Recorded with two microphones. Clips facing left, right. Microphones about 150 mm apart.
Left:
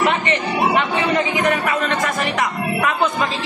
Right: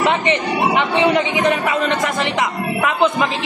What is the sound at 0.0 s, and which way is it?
A man's voice, 20° right (ahead or behind).